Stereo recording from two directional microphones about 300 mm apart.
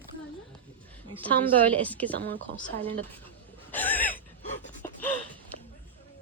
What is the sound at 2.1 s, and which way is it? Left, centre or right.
Speech, right.